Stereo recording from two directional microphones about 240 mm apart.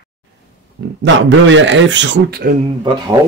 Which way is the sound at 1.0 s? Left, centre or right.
Right.